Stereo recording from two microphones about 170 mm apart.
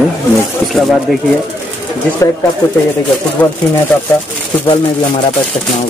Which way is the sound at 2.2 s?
20° left (ahead or behind).